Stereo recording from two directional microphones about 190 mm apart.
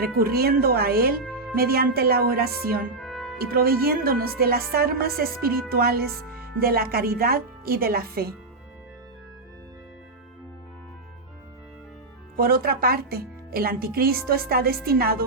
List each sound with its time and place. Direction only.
0.2 s a woman's voice: 55° right (ahead or behind)
1.2 s music: centre (ahead or behind)
1.5 s a woman's voice: 55° right (ahead or behind)
3.0 s music: centre (ahead or behind)
3.3 s a woman's voice: 55° right (ahead or behind)
12.4 s a woman's voice: 50° right (ahead or behind)